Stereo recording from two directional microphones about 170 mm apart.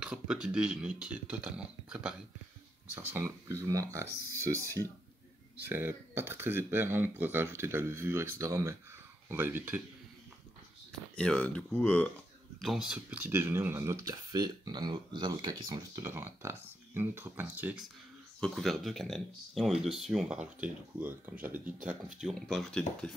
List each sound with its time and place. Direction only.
0.0 s speech: 5° right (ahead or behind)
5.7 s speech: 15° right (ahead or behind)
10.9 s speech: 5° left (ahead or behind); by 16.1 s 25° right (ahead or behind)
16.1 s speech: 15° right (ahead or behind)
18.4 s speech: centre (ahead or behind)
22.2 s speech: centre (ahead or behind)